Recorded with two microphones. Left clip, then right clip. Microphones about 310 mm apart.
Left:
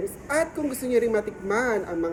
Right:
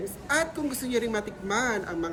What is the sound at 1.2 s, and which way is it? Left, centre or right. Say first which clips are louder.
Speech: left 3 dB; centre.